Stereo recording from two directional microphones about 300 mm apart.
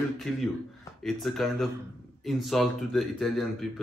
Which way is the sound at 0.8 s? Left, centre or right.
Centre.